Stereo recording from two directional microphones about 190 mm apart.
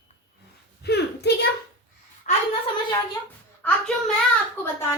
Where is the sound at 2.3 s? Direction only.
40° left (ahead or behind).